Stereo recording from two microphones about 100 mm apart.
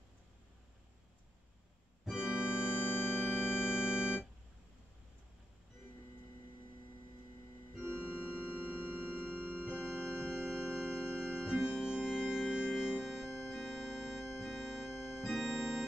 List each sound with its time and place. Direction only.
2.0 s keyboard: 5° right (ahead or behind)
2.7 s music: 20° left (ahead or behind)
3.8 s organ: 10° right (ahead or behind)
7.8 s organ: 15° right (ahead or behind)
8.5 s sine wave: 15° right (ahead or behind)
9.7 s organ: 15° right (ahead or behind)